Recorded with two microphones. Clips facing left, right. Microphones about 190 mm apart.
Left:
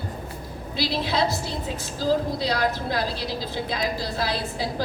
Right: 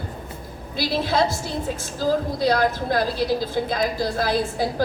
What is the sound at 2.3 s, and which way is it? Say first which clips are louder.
A woman's voice: right 4 dB; 50° right (ahead or behind).